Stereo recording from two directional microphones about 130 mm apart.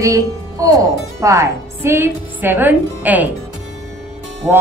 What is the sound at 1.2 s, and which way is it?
A woman's voice, 20° right (ahead or behind).